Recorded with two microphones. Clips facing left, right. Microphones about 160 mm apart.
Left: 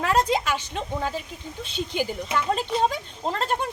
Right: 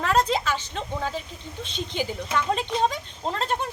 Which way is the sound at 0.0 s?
10° left (ahead or behind).